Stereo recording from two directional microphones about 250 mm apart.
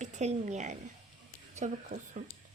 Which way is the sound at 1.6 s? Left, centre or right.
Right.